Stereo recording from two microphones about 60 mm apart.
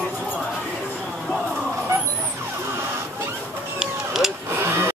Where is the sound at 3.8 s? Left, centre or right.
Centre.